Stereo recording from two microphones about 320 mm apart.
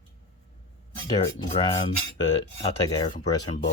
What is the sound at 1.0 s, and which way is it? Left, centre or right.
Speech, centre.